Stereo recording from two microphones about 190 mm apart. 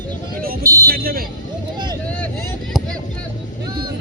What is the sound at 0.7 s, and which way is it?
Speech, 50° right (ahead or behind).